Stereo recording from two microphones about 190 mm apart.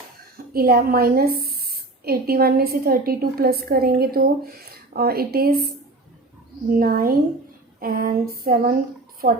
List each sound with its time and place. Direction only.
0.3 s a woman's voice: 50° right (ahead or behind)
6.7 s a woman's voice: 50° right (ahead or behind)